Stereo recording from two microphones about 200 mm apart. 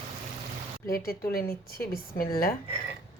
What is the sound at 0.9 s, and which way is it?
A woman's voice, 50° left (ahead or behind).